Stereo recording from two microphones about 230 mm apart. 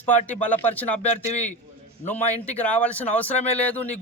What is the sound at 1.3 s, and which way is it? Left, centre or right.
Speech, left.